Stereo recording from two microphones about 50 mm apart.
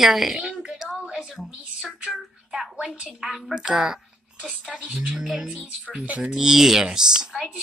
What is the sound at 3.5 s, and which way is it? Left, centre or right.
Speech, centre.